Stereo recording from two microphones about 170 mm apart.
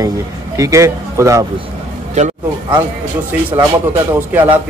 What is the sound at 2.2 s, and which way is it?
Speech, 45° right (ahead or behind).